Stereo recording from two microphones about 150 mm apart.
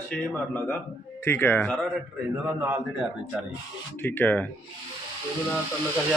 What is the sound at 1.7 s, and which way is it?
A man's voice, centre (ahead or behind).